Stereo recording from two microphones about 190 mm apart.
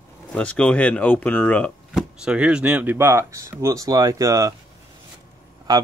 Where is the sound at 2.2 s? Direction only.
5° right (ahead or behind).